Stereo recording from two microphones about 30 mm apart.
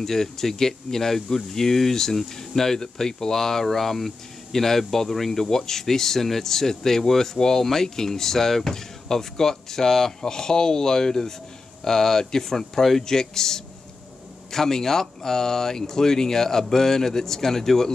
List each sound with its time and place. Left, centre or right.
0.0 s speech: centre